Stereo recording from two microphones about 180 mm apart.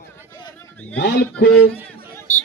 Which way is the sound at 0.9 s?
70° left (ahead or behind).